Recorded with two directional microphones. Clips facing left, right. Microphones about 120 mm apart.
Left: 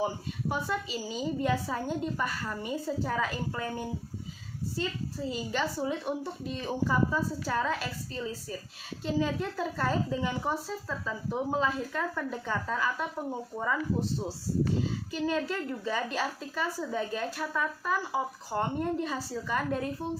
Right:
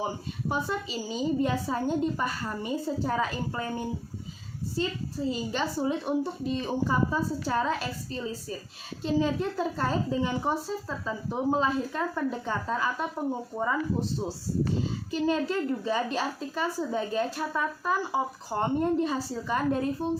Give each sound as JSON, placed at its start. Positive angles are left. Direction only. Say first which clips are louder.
{"t": 0.0, "sound": "a woman's voice", "louder": "left 1 dB", "side_deg": -25}
{"t": 15.1, "sound": "a woman's voice", "louder": "right 5 dB", "side_deg": -25}